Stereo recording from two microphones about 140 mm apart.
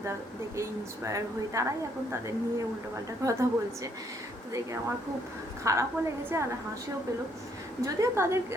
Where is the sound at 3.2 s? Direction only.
25° right (ahead or behind).